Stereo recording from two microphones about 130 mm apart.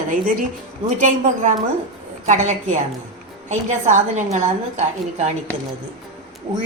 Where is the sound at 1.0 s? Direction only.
70° right (ahead or behind).